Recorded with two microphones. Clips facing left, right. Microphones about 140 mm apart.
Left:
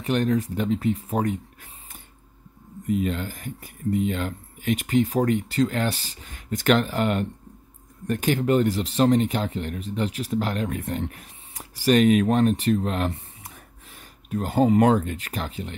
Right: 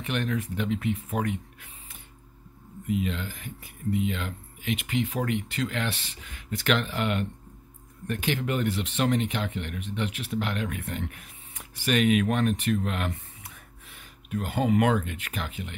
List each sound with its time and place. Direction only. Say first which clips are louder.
0.0 s speech: left 7 dB; 40° left (ahead or behind)